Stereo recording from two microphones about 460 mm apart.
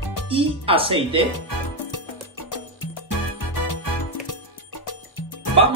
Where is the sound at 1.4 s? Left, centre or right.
Left.